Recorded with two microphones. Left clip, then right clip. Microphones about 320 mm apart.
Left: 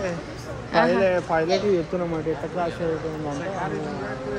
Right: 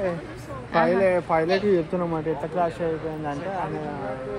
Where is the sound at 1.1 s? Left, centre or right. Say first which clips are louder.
Even; right.